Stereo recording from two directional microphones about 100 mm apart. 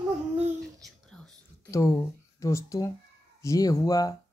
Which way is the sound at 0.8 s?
5° left (ahead or behind).